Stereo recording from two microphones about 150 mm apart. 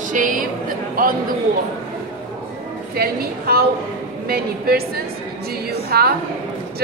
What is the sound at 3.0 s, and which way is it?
Speech, 90° right.